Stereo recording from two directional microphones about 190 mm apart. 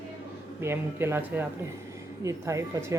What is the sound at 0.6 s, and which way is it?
Speech, 10° right (ahead or behind).